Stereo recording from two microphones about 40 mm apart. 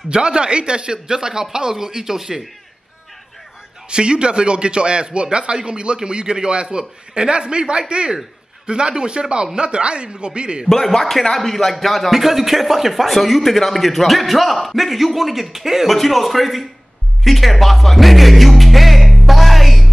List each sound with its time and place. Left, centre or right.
0.1 s speech: right
3.9 s speech: right
10.7 s a man's voice: centre
17.2 s music: centre